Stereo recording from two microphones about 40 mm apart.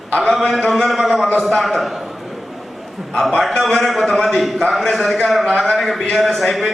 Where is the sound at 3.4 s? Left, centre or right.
Centre.